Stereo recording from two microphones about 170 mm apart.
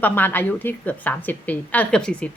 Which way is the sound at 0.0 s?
10° left (ahead or behind).